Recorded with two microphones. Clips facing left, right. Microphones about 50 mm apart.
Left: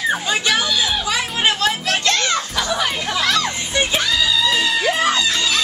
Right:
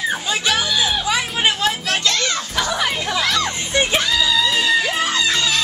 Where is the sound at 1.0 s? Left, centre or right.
Centre.